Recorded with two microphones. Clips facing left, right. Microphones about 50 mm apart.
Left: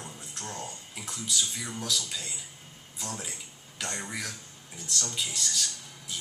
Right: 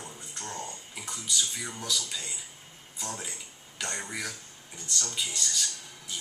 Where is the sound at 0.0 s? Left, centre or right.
Centre.